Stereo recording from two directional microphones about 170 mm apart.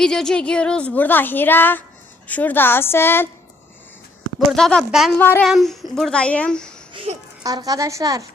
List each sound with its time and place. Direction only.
0.0 s speech: 5° left (ahead or behind)
4.4 s a woman's voice: 5° left (ahead or behind)
5.1 s speech: 10° left (ahead or behind)
5.5 s a woman's voice: centre (ahead or behind)
6.9 s babbling: 35° right (ahead or behind)
7.4 s a woman's voice: 20° right (ahead or behind)